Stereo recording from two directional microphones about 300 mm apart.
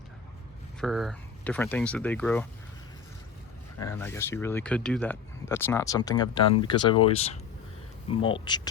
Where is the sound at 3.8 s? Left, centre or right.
Centre.